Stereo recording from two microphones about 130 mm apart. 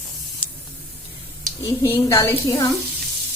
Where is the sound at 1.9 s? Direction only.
20° left (ahead or behind).